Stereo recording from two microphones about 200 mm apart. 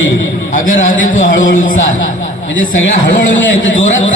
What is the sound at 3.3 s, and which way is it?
Speech, 70° left (ahead or behind).